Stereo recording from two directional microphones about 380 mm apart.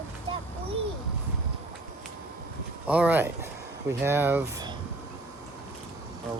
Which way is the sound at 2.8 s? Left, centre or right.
Centre.